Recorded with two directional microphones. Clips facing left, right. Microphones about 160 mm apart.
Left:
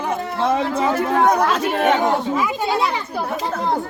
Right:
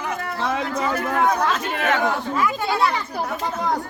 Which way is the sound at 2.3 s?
15° left (ahead or behind).